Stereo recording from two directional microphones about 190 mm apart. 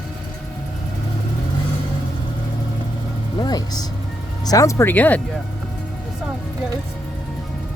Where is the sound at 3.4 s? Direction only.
20° left (ahead or behind).